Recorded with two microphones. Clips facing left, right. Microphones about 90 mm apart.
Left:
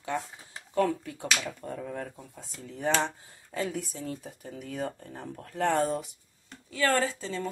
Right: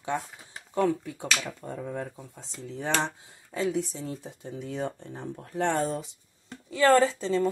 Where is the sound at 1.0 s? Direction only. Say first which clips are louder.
Even; 20° right (ahead or behind).